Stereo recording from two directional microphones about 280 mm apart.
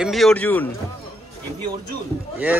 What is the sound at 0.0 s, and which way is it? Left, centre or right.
Speech, centre.